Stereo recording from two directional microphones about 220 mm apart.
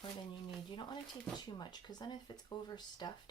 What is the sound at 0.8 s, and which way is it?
Speech, 20° left (ahead or behind).